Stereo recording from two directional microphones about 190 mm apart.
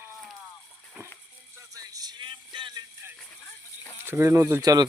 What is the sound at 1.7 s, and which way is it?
Music, 20° right (ahead or behind).